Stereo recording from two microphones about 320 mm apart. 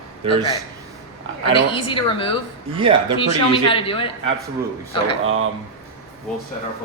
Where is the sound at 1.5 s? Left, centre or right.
Centre.